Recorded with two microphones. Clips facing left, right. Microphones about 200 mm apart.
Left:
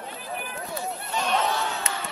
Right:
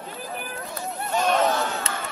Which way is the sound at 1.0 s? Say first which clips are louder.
Right 5 dB; 45° right (ahead or behind).